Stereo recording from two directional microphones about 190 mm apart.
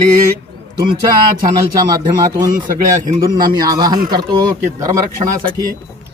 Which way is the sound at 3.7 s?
20° right (ahead or behind).